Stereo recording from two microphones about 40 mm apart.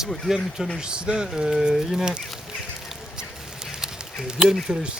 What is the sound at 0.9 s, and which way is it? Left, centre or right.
Speech, right.